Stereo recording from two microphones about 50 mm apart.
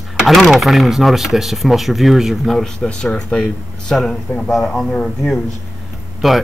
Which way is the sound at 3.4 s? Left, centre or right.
Centre.